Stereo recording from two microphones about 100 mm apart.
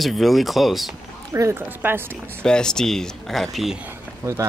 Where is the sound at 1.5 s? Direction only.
20° right (ahead or behind).